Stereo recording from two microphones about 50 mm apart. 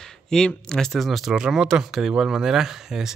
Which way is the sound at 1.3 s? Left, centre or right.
Centre.